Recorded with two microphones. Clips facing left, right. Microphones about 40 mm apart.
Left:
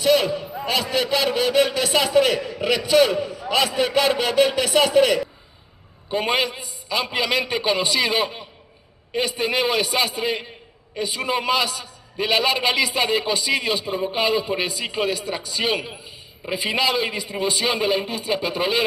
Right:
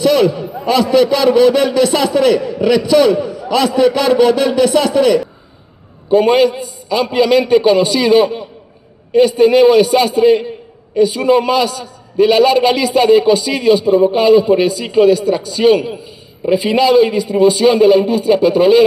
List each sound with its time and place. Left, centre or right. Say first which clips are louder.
0.0 s a sound: right 7 dB; centre
0.7 s a man's voice: right 11 dB; centre
6.1 s a man's voice: right 12 dB; centre
14.7 s a man's voice: right 13 dB; centre